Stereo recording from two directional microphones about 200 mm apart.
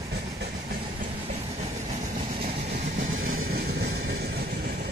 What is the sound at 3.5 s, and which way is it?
Vehicle, 55° right (ahead or behind).